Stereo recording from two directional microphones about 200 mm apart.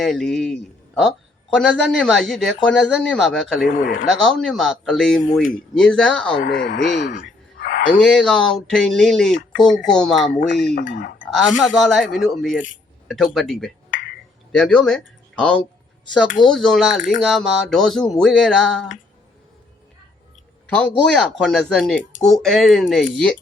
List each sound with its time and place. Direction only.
0.0 s speech: centre (ahead or behind)
3.6 s speech: 45° left (ahead or behind)
4.2 s speech: centre (ahead or behind)
6.4 s speech: 50° left (ahead or behind)
7.9 s speech: 5° left (ahead or behind)
10.8 s speech: 55° left (ahead or behind)
11.3 s speech: centre (ahead or behind)
20.7 s speech: 5° left (ahead or behind)